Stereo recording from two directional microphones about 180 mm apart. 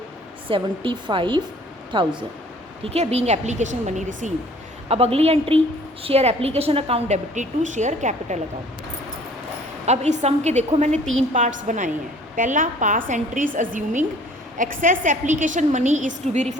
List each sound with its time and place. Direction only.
0.4 s a woman's voice: 30° right (ahead or behind)
9.8 s a woman's voice: 40° right (ahead or behind)